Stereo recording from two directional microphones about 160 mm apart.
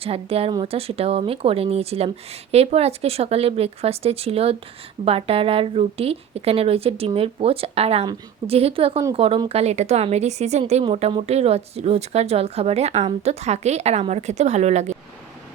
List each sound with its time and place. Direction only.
0.0 s speech: 40° right (ahead or behind)